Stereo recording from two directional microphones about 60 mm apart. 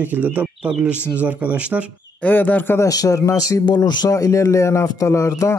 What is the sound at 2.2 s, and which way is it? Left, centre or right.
Speech, left.